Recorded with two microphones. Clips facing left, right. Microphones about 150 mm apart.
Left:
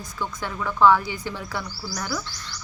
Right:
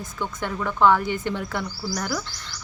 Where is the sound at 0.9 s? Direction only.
55° right (ahead or behind).